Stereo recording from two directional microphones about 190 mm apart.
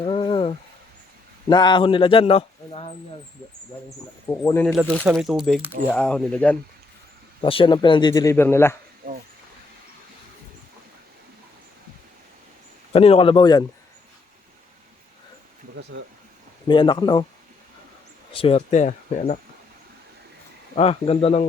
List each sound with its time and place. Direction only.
0.0 s a sound: 25° left (ahead or behind)
1.5 s a man's voice: 25° left (ahead or behind)
3.8 s speech: 15° left (ahead or behind)
4.6 s speech: centre (ahead or behind)
7.4 s a man's voice: 25° left (ahead or behind); by 8.7 s 10° left (ahead or behind)
9.0 s a sound: 45° right (ahead or behind)
12.9 s a man's voice: 30° left (ahead or behind)
16.6 s a man's voice: 25° left (ahead or behind)
18.3 s speech: 30° left (ahead or behind)
20.7 s speech: 30° left (ahead or behind)